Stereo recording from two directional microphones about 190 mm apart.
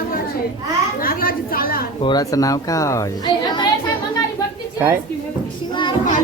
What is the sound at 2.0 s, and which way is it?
A woman's voice, 20° left (ahead or behind).